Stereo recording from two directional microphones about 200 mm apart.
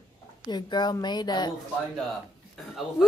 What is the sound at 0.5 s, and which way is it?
Speech, 20° left (ahead or behind).